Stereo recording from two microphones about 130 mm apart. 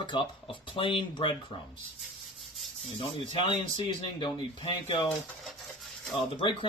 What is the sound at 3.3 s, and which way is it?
Speech, 40° left (ahead or behind).